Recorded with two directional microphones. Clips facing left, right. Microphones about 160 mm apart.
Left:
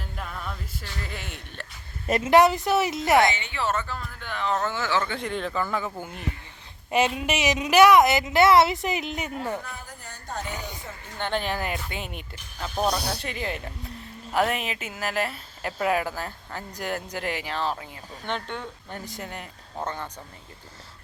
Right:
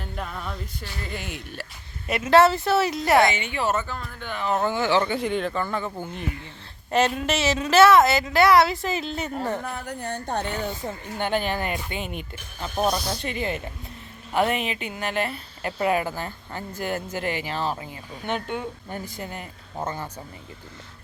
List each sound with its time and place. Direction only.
0.0 s music: centre (ahead or behind)
1.0 s speech: centre (ahead or behind)
2.2 s a woman's voice: 15° left (ahead or behind)
3.3 s a woman's voice: 15° right (ahead or behind); by 9.3 s 15° left (ahead or behind)
9.7 s speech: 70° right (ahead or behind)
10.8 s a woman's voice: 35° right (ahead or behind)
11.2 s speech: 5° right (ahead or behind)